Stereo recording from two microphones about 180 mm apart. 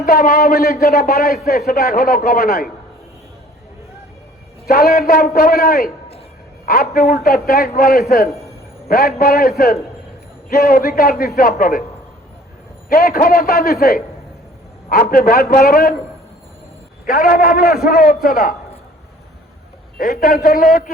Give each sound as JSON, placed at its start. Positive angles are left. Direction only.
{"t": 0.0, "sound": "speech", "side_deg": 50}
{"t": 4.6, "sound": "speech", "side_deg": 60}
{"t": 10.5, "sound": "a man's voice", "side_deg": 55}
{"t": 12.9, "sound": "a man's voice", "side_deg": 55}
{"t": 17.1, "sound": "a man's voice", "side_deg": 50}
{"t": 20.0, "sound": "a man's voice", "side_deg": 55}